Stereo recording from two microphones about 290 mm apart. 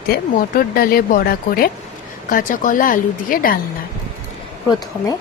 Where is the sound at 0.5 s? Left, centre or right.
Left.